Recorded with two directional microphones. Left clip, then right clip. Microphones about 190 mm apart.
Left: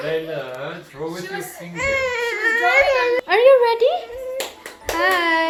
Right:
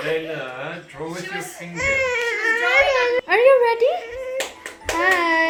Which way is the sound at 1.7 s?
5° left (ahead or behind).